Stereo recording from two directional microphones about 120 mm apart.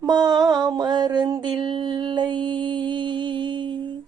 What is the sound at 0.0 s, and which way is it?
Mantra, 35° right (ahead or behind).